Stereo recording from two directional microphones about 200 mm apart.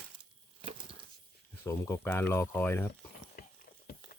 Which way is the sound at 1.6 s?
15° left (ahead or behind).